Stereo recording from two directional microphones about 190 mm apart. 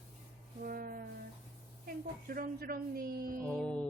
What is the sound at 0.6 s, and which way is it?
Speech, 50° right (ahead or behind).